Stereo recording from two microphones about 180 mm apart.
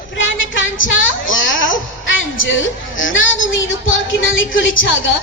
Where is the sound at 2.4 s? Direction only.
90° left.